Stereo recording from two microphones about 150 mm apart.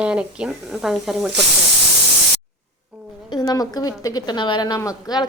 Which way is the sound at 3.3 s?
25° left (ahead or behind).